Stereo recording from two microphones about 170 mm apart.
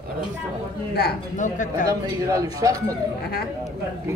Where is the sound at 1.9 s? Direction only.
20° right (ahead or behind).